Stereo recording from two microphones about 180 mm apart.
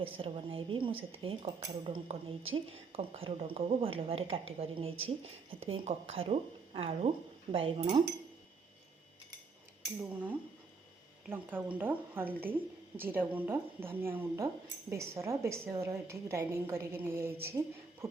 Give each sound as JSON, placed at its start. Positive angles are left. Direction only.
{"t": 0.0, "sound": "a woman's voice", "side_deg": -30}
{"t": 10.0, "sound": "a woman's voice", "side_deg": -10}